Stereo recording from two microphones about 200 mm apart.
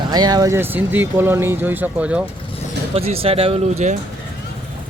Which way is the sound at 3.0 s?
30° right (ahead or behind).